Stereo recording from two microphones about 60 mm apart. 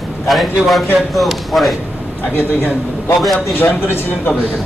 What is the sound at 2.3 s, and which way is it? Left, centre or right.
A man's voice, left.